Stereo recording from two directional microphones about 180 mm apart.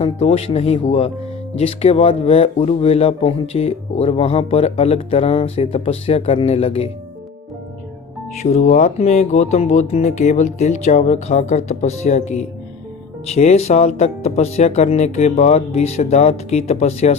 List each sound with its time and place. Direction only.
0.0 s speech: 35° left (ahead or behind)
8.4 s speech: 40° left (ahead or behind)